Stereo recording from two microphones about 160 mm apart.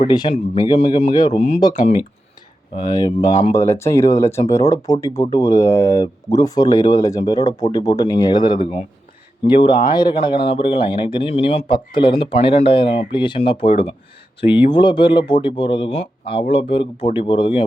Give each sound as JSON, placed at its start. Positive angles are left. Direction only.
{"t": 0.1, "sound": "speech", "side_deg": 30}
{"t": 1.7, "sound": "speech", "side_deg": 45}
{"t": 2.7, "sound": "speech", "side_deg": 25}